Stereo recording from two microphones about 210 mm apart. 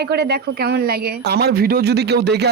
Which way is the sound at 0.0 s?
50° right (ahead or behind).